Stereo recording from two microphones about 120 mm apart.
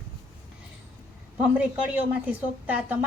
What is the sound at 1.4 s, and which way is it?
Speech, 10° right (ahead or behind).